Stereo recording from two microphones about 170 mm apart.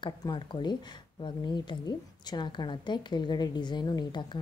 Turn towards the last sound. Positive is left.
turn(degrees=25)  # may be behind; listen again after turning